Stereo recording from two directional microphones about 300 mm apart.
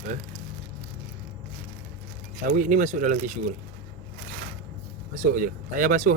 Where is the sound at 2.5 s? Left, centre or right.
Right.